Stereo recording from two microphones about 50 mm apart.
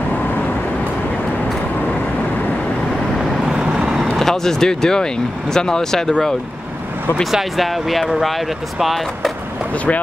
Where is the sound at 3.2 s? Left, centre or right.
Centre.